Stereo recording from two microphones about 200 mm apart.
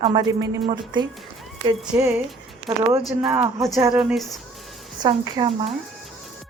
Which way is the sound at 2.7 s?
20° right (ahead or behind).